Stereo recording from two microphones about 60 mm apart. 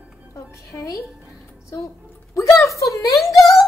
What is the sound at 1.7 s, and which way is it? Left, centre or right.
A woman's voice, left.